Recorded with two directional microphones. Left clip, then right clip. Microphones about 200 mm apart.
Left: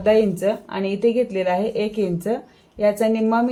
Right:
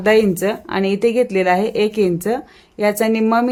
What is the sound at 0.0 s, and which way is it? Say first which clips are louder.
Speech: right 3 dB; 45° right (ahead or behind).